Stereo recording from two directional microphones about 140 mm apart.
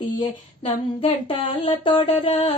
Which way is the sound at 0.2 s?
40° left (ahead or behind).